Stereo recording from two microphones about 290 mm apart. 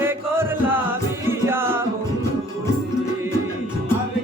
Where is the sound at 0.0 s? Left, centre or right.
Centre.